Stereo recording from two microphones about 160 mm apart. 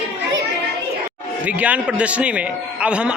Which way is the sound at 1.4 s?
10° right (ahead or behind).